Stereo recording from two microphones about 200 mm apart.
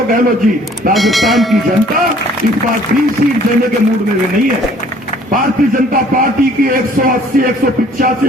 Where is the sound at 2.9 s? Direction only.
60° right (ahead or behind).